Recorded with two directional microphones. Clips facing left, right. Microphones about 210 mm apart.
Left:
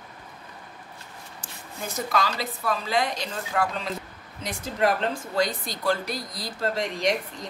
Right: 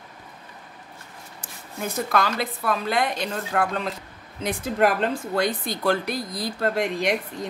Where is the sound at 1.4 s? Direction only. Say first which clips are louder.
Right 5 dB; 55° right (ahead or behind).